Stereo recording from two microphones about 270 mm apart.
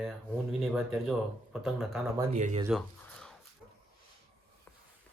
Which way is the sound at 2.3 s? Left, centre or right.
Right.